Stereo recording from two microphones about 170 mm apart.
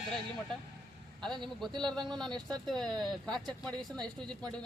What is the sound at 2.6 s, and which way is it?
Speech, centre (ahead or behind).